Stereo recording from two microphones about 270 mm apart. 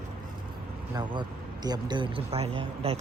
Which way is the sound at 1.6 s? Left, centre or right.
Centre.